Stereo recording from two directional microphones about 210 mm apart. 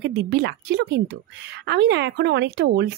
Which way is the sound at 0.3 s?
50° right (ahead or behind).